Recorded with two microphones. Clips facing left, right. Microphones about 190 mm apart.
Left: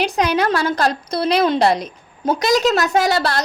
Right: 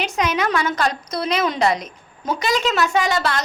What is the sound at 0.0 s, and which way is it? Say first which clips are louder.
A woman's voice: left 4 dB; 35° left (ahead or behind).